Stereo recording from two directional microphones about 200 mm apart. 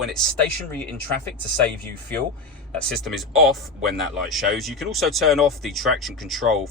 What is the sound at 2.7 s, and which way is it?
Speech, centre (ahead or behind).